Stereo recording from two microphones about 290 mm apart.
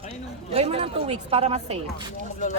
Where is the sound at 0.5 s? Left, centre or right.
Centre.